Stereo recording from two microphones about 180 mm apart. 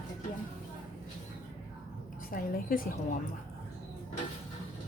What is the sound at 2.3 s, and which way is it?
Speech, 50° left (ahead or behind).